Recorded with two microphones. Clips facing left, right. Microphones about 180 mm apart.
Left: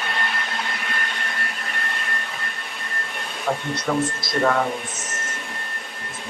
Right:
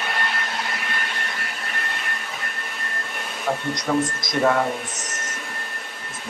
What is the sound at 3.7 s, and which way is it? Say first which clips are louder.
Speech: even; 20° right (ahead or behind).